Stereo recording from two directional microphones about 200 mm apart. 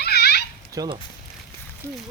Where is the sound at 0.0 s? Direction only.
55° left (ahead or behind).